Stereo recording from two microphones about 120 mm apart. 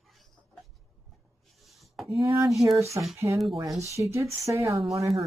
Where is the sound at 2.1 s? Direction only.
25° right (ahead or behind).